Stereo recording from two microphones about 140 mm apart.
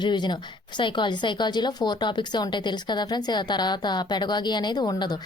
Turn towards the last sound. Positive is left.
turn(degrees=30)  # may be behind; listen again after turning